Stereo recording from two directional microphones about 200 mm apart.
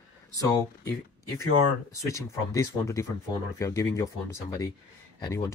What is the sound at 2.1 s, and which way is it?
Speech, 15° left (ahead or behind).